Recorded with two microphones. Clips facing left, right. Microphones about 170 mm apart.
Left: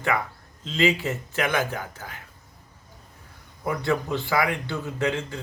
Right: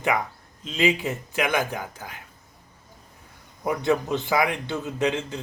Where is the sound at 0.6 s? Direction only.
15° right (ahead or behind).